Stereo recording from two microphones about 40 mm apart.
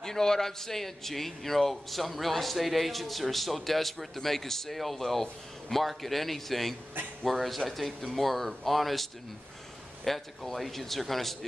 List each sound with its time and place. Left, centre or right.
0.0 s a man's voice: centre